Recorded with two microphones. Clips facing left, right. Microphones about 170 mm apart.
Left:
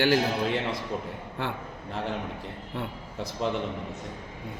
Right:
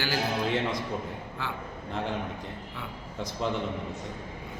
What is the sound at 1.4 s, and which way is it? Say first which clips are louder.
Speech: left 4 dB; 60° left (ahead or behind).